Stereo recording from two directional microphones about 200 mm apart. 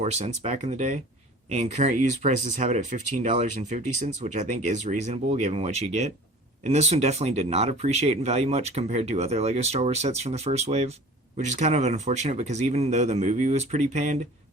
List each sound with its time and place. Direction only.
0.0 s speech: 35° right (ahead or behind)